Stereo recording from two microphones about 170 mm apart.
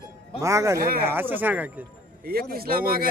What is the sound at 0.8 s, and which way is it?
Speech, 60° right (ahead or behind).